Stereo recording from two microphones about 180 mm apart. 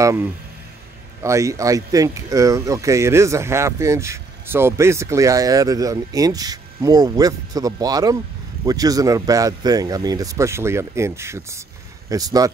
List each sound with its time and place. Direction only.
0.0 s speech: 15° right (ahead or behind)